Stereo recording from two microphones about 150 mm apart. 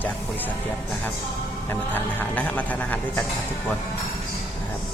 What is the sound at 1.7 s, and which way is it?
A man's voice, 10° left (ahead or behind).